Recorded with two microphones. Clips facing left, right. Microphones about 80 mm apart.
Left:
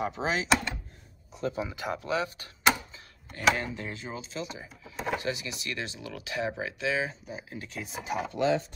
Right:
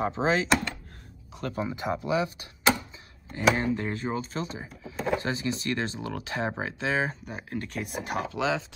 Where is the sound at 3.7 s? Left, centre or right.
Right.